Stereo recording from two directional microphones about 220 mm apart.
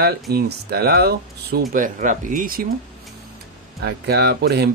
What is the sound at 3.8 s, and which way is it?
Speech, 50° right (ahead or behind).